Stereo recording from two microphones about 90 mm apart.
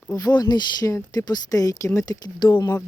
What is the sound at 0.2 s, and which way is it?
Speech, 50° left (ahead or behind).